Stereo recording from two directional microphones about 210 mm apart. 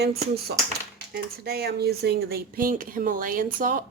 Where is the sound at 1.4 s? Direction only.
50° right (ahead or behind).